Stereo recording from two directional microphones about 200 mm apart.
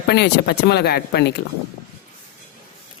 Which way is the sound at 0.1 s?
55° left (ahead or behind).